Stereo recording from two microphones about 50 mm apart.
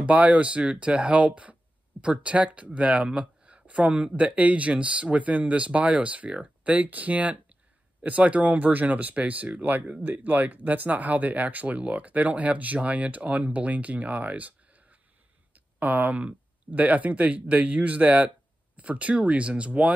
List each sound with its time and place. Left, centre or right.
0.0 s speech: right
3.1 s a sound: right
4.2 s speech: right